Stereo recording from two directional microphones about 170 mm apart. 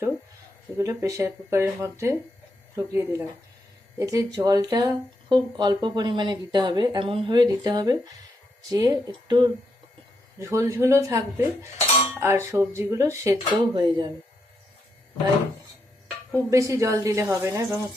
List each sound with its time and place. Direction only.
0.8 s speech: 20° right (ahead or behind)
16.3 s speech: 20° right (ahead or behind)